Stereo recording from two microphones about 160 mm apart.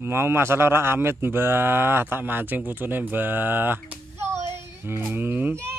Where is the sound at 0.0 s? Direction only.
15° right (ahead or behind).